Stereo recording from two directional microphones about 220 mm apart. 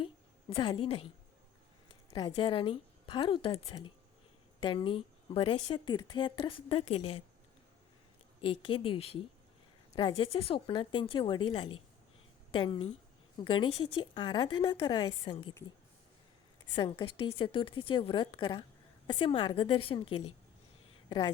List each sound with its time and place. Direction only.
0.5 s a woman's voice: 25° left (ahead or behind)
2.0 s a woman's voice: 20° left (ahead or behind)
8.4 s a woman's voice: 25° left (ahead or behind)
16.7 s a woman's voice: 20° left (ahead or behind)